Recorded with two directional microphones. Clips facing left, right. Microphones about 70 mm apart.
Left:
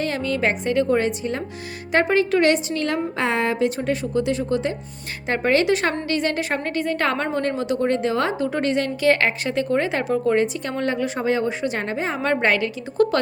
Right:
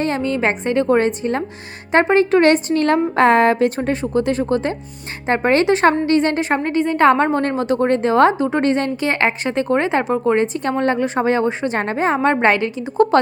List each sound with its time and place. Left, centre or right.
0.0 s a woman's voice: right